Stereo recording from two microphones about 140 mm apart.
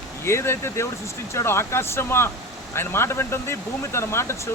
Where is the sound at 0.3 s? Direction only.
20° left (ahead or behind).